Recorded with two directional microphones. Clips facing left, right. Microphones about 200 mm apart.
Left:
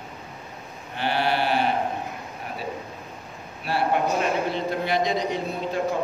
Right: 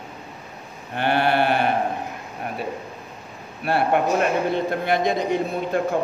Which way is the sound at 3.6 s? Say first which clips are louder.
Right 3 dB; 55° right (ahead or behind).